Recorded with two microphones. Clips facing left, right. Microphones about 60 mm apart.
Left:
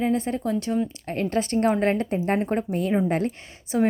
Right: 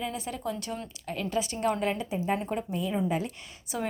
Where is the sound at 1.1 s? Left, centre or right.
Left.